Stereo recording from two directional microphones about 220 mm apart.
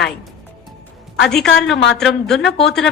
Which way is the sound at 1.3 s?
Centre (ahead or behind).